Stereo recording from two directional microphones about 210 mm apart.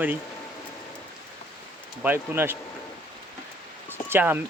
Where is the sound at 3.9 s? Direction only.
10° right (ahead or behind).